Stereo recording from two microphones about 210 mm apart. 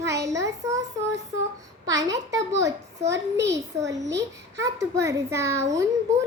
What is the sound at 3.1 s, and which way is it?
Speech, 55° right (ahead or behind).